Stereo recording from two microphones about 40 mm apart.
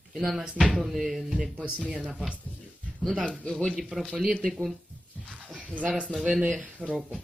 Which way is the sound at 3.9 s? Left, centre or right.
Centre.